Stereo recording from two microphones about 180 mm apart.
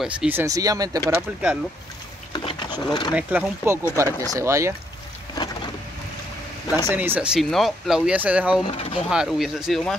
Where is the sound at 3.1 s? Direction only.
10° right (ahead or behind).